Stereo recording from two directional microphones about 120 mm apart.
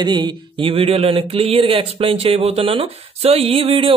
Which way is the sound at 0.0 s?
40° right (ahead or behind).